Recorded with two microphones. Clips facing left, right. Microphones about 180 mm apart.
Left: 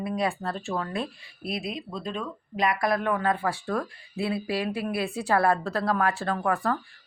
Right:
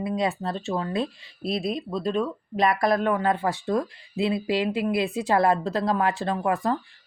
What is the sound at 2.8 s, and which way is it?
Speech, 25° right (ahead or behind).